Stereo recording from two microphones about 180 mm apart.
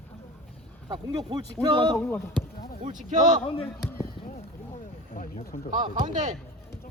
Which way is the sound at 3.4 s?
30° left (ahead or behind).